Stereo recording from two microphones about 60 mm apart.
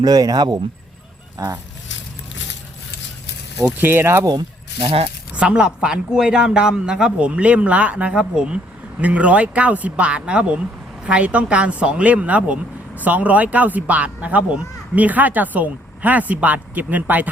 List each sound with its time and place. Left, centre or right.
0.0 s speech: right
3.8 s speech: right
4.0 s speech: right
5.3 s a man's voice: centre